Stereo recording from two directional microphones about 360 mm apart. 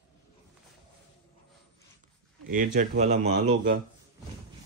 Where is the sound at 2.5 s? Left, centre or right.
Right.